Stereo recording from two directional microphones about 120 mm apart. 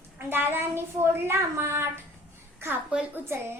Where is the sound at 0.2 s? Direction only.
20° right (ahead or behind).